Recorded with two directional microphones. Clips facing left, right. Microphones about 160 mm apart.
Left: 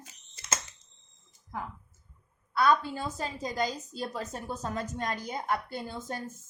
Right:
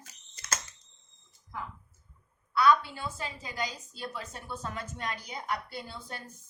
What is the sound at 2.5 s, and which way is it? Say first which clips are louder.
A woman's voice: right 1 dB; 45° left (ahead or behind).